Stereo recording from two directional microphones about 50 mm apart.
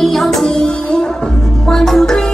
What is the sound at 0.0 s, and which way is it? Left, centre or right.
Music, centre.